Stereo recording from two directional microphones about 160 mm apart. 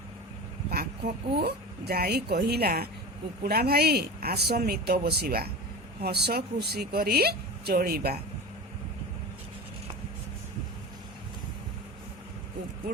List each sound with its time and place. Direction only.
0.7 s a woman's voice: 75° right (ahead or behind)